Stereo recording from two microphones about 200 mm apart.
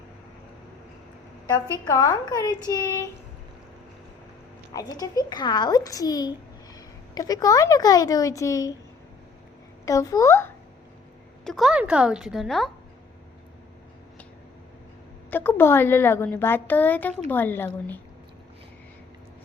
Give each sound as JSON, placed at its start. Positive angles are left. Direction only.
{"t": 1.8, "sound": "a child's voice", "side_deg": 20}
{"t": 4.7, "sound": "a child's voice", "side_deg": 20}
{"t": 9.8, "sound": "a woman's voice", "side_deg": 15}
{"t": 11.4, "sound": "speech", "side_deg": 0}
{"t": 15.3, "sound": "a woman's voice", "side_deg": 10}